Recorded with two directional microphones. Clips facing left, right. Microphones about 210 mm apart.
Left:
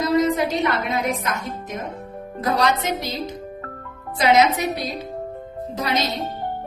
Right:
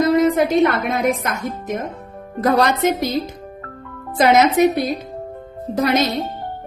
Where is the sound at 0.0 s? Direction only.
55° right (ahead or behind).